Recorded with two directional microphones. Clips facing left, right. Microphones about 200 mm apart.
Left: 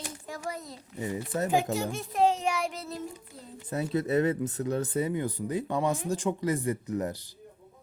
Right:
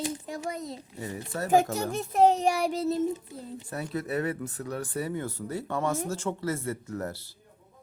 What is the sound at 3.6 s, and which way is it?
Speech, 25° left (ahead or behind).